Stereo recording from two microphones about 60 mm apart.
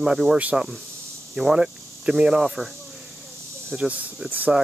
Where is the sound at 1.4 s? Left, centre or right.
Centre.